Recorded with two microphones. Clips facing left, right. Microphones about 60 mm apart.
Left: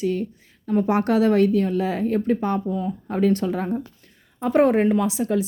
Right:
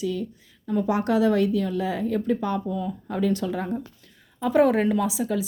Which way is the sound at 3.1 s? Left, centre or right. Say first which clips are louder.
Left 4 dB; left.